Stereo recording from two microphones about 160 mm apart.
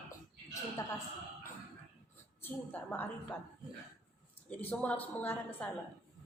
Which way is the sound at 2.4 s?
10° left (ahead or behind).